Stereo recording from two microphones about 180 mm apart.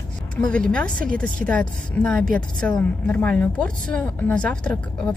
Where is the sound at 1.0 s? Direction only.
50° right (ahead or behind).